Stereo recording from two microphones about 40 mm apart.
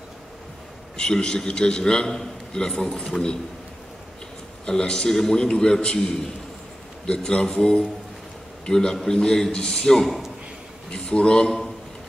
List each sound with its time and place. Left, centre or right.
0.9 s a man's voice: centre
4.6 s a man's voice: left
10.0 s a man's voice: centre
10.9 s a man's voice: left